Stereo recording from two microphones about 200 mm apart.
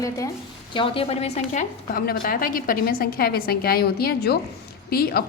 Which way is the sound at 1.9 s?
45° left (ahead or behind).